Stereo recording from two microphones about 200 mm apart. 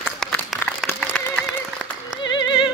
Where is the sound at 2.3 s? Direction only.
25° left (ahead or behind).